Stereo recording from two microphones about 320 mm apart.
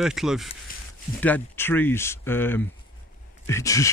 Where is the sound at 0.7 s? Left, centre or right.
Left.